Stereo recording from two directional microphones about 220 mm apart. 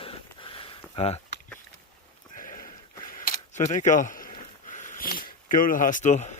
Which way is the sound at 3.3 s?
35° left (ahead or behind).